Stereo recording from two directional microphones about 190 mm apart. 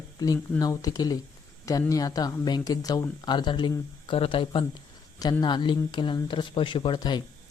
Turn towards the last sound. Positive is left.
turn(degrees=25)  # may be behind; listen again after turning